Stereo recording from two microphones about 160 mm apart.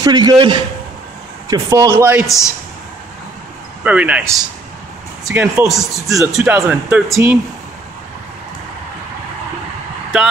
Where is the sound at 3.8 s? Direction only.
10° right (ahead or behind).